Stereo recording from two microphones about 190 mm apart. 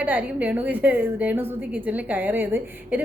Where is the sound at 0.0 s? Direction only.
10° right (ahead or behind).